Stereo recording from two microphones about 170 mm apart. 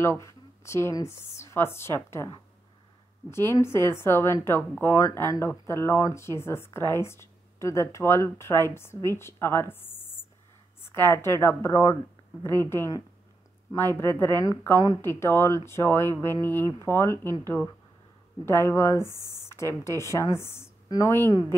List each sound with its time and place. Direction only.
0.0 s a woman's voice: 15° left (ahead or behind)
18.4 s a woman's voice: 15° left (ahead or behind)